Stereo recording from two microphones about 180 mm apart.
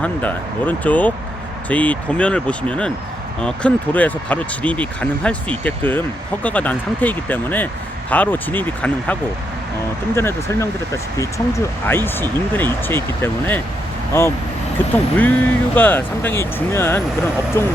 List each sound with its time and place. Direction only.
0.0 s speech: 10° left (ahead or behind)
10.2 s speech: 15° left (ahead or behind)